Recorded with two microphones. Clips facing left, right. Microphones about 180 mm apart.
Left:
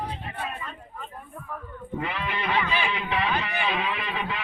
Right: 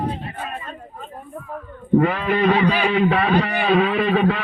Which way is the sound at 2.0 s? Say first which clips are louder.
Right 9 dB; 50° right (ahead or behind).